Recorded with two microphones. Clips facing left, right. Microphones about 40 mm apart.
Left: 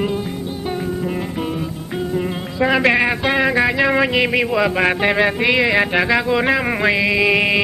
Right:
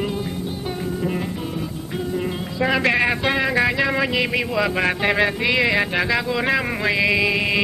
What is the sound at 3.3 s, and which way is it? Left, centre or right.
Music, centre.